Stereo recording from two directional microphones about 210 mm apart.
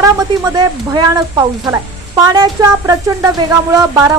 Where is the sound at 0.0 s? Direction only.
15° right (ahead or behind).